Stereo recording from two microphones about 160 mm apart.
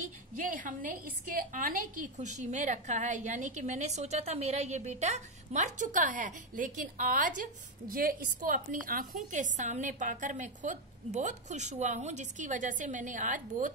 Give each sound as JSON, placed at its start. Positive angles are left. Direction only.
{"t": 0.4, "sound": "a woman's voice", "side_deg": -60}